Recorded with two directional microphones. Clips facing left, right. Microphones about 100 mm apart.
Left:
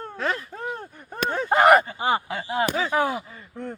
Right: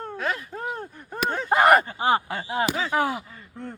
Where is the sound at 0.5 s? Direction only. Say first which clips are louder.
Right 1 dB; 5° right (ahead or behind).